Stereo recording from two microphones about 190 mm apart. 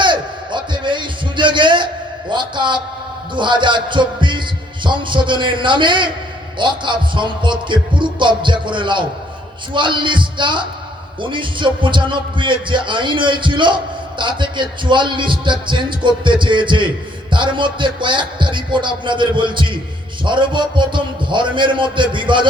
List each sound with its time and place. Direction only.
0.0 s a sound: 25° right (ahead or behind)
2.3 s a man's voice: 25° right (ahead or behind)
3.3 s heart sounds: 25° right (ahead or behind)
6.6 s speech: 25° right (ahead or behind)